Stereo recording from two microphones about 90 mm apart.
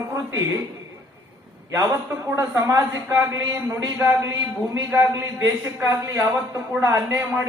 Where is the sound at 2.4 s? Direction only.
40° right (ahead or behind).